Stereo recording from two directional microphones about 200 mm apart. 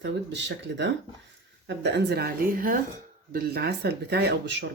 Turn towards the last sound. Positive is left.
turn(degrees=-60)  # may be behind; listen again after turning